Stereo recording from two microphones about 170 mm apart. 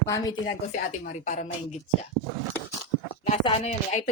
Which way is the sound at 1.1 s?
45° left (ahead or behind).